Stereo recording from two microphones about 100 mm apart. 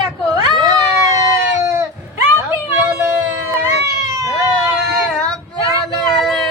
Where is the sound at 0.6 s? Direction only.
40° right (ahead or behind).